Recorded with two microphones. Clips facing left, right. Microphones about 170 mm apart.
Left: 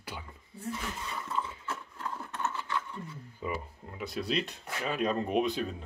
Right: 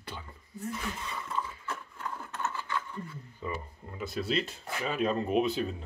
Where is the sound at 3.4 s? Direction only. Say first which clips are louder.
Left 1 dB; 10° left (ahead or behind).